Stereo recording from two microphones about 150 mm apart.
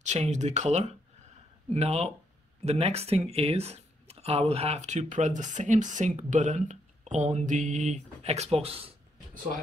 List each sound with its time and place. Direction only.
0.0 s speech: 50° right (ahead or behind)